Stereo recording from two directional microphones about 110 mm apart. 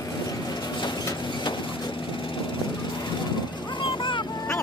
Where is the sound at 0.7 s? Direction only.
40° left (ahead or behind).